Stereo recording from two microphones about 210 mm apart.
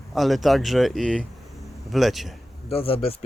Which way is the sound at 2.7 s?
25° left (ahead or behind).